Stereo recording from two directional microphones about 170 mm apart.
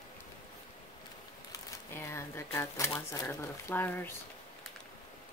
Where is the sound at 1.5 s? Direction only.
15° left (ahead or behind).